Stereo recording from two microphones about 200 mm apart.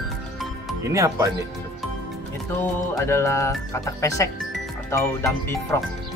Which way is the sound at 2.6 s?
15° left (ahead or behind).